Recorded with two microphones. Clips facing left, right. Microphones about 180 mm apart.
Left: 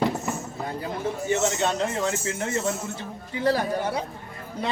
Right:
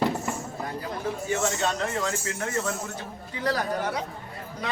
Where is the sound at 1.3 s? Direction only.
20° left (ahead or behind).